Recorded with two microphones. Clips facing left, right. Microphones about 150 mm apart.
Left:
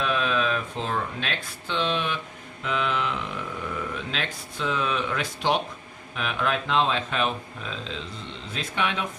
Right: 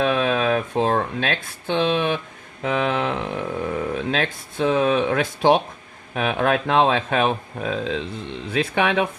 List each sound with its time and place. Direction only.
0.0 s speech: 65° right (ahead or behind)
8.4 s speech: 65° right (ahead or behind)